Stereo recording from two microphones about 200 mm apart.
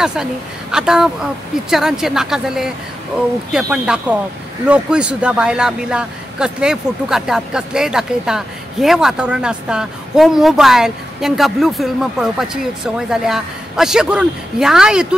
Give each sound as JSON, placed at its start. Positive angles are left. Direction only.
{"t": 0.0, "sound": "speech", "side_deg": -5}